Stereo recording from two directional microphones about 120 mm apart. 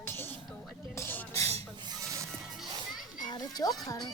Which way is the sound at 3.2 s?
35° left (ahead or behind).